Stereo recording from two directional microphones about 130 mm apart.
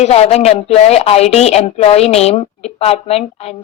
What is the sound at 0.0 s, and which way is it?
A woman's voice, 55° left (ahead or behind).